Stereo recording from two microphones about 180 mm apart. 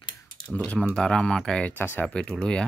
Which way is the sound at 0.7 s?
5° left (ahead or behind).